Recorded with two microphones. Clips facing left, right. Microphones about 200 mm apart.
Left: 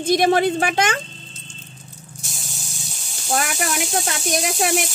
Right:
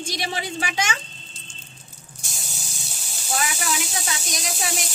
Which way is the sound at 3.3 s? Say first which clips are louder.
Left 4 dB; 55° left (ahead or behind).